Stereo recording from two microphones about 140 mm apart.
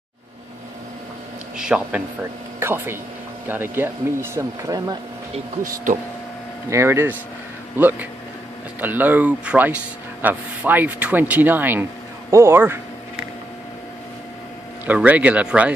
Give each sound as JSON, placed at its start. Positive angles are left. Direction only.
{"t": 1.6, "sound": "speech", "side_deg": -10}
{"t": 6.7, "sound": "speech", "side_deg": -20}
{"t": 14.9, "sound": "speech", "side_deg": -10}